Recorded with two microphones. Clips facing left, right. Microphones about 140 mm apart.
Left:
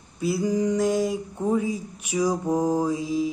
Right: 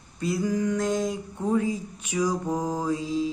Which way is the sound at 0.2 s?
10° left (ahead or behind).